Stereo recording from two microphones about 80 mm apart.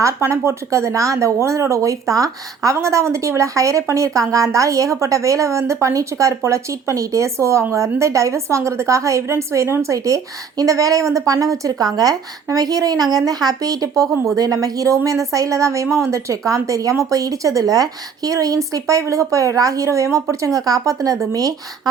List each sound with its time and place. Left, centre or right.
0.0 s a woman's voice: right